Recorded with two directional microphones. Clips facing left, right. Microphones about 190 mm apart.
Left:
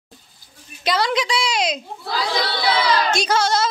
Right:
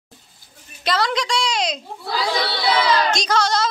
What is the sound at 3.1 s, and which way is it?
Speech, 5° left (ahead or behind).